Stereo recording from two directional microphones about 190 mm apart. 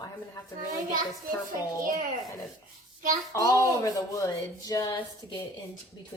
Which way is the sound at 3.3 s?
15° left (ahead or behind).